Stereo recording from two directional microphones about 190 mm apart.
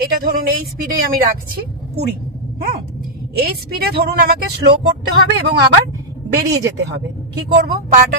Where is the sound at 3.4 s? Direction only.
55° right (ahead or behind).